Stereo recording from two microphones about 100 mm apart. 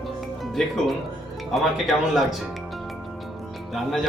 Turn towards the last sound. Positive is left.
turn(degrees=0)  # may be behind; listen again after turning